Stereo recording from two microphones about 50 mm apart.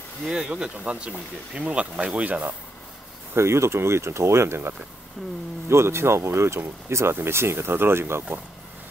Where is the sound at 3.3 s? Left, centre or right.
Right.